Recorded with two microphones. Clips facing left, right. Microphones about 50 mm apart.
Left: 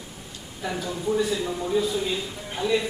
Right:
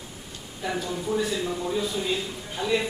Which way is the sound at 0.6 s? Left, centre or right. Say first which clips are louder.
Even; centre.